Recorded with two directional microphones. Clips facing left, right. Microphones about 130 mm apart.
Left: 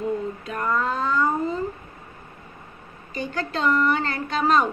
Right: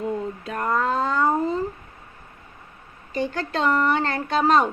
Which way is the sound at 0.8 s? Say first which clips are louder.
Right 2 dB; 30° right (ahead or behind).